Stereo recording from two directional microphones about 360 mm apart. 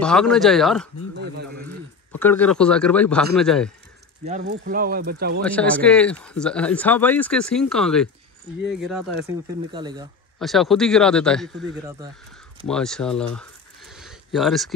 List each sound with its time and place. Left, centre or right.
0.0 s speech: centre
2.2 s speech: centre
4.2 s speech: right
5.4 s speech: centre
10.4 s speech: centre
13.4 s a sound: centre